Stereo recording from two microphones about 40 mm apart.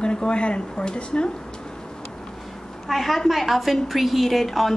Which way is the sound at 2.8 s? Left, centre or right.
Centre.